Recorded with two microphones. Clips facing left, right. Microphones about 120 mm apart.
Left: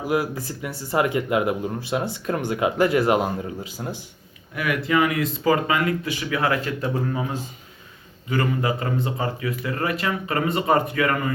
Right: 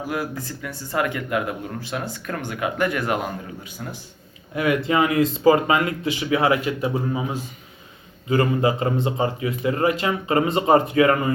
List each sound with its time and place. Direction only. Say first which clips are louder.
0.0 s speech: left 4 dB; 20° left (ahead or behind)
4.5 s speech: right 2 dB; 25° right (ahead or behind)
8.3 s speech: right 4 dB; 25° right (ahead or behind)